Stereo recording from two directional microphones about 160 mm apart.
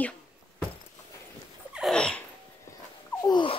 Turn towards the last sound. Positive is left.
turn(degrees=30)  # may be behind; listen again after turning